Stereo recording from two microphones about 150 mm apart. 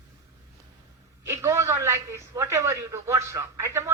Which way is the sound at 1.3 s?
20° right (ahead or behind).